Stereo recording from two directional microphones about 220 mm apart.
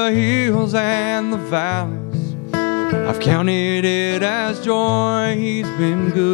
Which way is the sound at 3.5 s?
5° right (ahead or behind).